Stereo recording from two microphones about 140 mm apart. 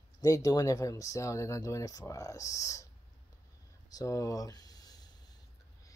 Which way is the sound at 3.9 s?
20° left (ahead or behind).